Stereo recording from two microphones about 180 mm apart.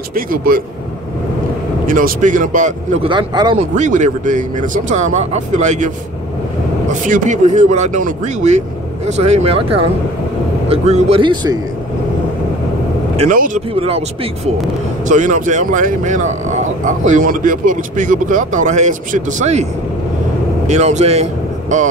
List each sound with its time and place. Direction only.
0.1 s speech: 50° right (ahead or behind)
1.9 s speech: 50° right (ahead or behind)
3.1 s speech: 25° right (ahead or behind)
3.5 s speech: 40° right (ahead or behind)
6.9 s speech: 45° right (ahead or behind)
10.7 s speech: 35° right (ahead or behind)
13.1 s speech: 35° right (ahead or behind)
15.0 s speech: 45° right (ahead or behind)
20.6 s speech: 40° right (ahead or behind)